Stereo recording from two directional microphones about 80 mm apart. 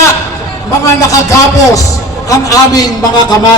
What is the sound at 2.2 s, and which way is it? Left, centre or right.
A man's voice, left.